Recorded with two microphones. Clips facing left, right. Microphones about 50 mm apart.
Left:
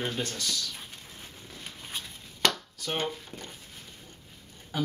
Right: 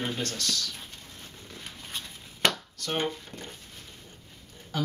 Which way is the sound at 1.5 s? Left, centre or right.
Centre.